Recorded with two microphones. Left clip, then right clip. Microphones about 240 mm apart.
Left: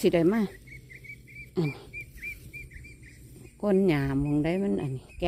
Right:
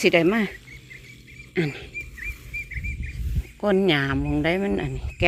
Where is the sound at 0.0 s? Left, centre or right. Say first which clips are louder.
Right 5 dB; centre.